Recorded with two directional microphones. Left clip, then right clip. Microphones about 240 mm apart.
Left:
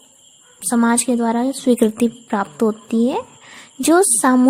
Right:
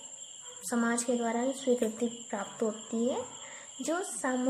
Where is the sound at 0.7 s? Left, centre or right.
Left.